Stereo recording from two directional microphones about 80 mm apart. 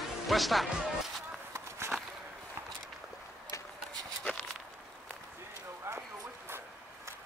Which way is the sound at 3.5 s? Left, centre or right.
Left.